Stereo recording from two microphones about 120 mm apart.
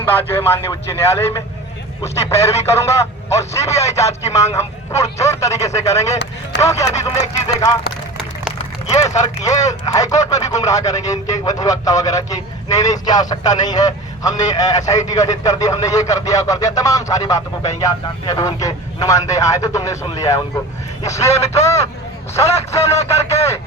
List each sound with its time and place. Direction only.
0.0 s speech: 15° left (ahead or behind)
8.9 s speech: 25° left (ahead or behind)